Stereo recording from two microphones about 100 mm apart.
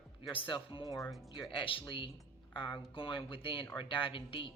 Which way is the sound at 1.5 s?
60° left (ahead or behind).